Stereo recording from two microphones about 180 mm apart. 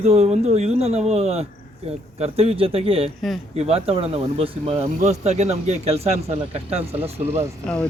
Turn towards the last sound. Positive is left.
turn(degrees=5)  # may be behind; listen again after turning